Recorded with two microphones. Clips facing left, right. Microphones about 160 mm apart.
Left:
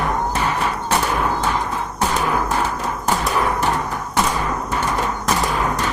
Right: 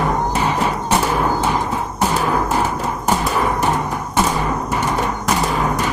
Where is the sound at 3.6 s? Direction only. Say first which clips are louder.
Right 2 dB; 20° right (ahead or behind).